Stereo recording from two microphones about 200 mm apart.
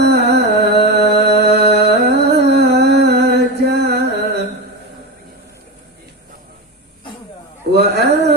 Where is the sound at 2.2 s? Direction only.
55° right (ahead or behind).